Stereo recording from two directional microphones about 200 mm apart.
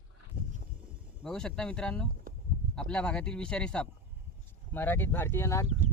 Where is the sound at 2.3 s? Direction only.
45° right (ahead or behind).